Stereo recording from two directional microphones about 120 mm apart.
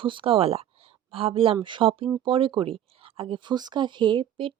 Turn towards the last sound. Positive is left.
turn(degrees=-45)  # may be behind; listen again after turning